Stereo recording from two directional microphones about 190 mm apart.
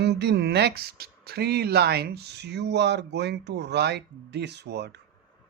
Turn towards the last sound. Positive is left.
turn(degrees=-60)  # may be behind; listen again after turning